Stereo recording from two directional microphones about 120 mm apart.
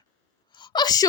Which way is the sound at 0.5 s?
40° left (ahead or behind).